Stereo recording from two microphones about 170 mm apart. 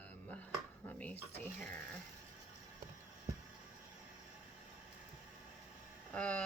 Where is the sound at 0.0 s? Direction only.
10° left (ahead or behind).